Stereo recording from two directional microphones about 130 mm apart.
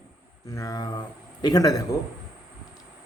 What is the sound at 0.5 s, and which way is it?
A man's voice, 30° left (ahead or behind).